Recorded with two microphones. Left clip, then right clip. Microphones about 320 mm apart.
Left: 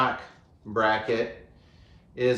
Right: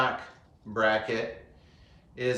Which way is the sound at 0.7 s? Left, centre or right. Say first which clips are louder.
Left 2 dB; centre.